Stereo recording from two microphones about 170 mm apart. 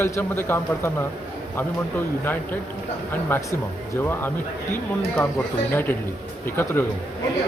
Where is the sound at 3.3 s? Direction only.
10° left (ahead or behind).